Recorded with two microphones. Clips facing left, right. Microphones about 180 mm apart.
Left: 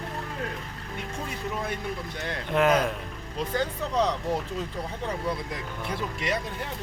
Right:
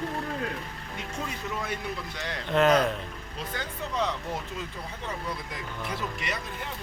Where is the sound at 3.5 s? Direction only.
35° left (ahead or behind).